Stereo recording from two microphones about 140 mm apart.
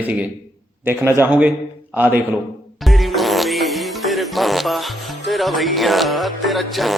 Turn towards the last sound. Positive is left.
turn(degrees=0)  # may be behind; listen again after turning